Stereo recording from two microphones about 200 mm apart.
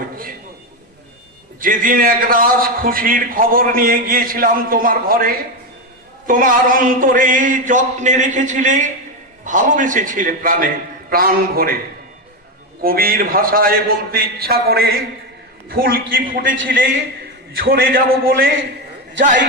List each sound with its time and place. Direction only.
1.6 s a man's voice: 45° right (ahead or behind)
12.8 s a man's voice: 45° right (ahead or behind)